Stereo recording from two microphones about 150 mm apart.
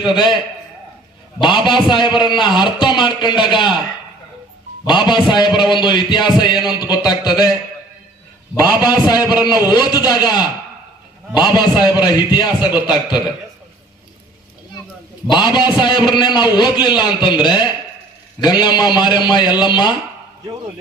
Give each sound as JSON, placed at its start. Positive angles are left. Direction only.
{"t": 0.1, "sound": "speech", "side_deg": 30}
{"t": 1.4, "sound": "speech", "side_deg": 30}
{"t": 4.9, "sound": "a man's voice", "side_deg": 30}
{"t": 8.5, "sound": "a man's voice", "side_deg": 25}
{"t": 15.3, "sound": "a man's voice", "side_deg": 30}